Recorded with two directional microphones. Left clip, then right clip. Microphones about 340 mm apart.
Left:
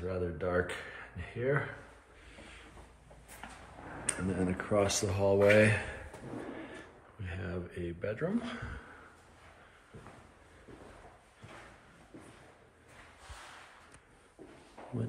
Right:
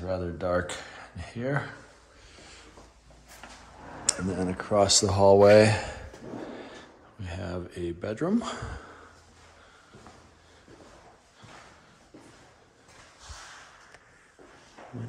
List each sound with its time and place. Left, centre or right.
0.0 s speech: centre
4.0 s speech: centre
4.9 s speech: centre